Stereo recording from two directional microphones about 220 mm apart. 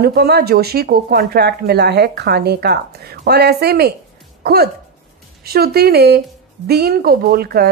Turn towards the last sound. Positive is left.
turn(degrees=-45)  # may be behind; listen again after turning